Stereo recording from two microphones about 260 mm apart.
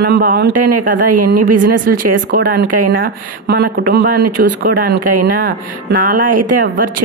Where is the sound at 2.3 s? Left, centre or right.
Right.